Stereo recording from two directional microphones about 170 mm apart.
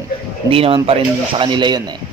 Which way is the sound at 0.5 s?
35° right (ahead or behind).